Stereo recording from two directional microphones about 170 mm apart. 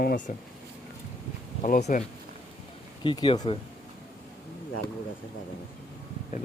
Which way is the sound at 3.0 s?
30° left (ahead or behind).